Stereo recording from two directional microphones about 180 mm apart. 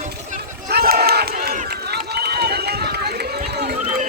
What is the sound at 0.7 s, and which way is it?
Run, 60° right (ahead or behind).